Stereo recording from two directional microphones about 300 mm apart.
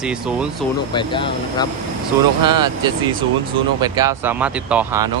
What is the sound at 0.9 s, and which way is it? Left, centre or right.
Speech, centre.